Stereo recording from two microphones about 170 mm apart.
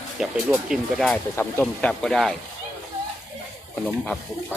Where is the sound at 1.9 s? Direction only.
Centre (ahead or behind).